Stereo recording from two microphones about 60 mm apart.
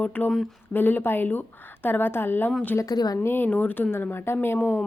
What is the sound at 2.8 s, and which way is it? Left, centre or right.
Speech, left.